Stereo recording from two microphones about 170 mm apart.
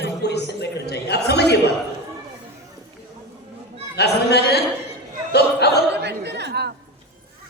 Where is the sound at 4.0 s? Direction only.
75° left (ahead or behind).